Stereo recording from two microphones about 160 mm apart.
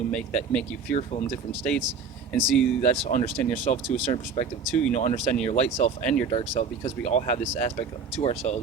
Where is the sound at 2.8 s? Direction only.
55° left (ahead or behind).